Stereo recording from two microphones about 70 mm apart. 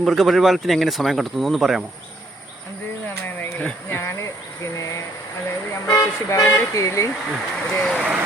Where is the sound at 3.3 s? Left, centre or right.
Left.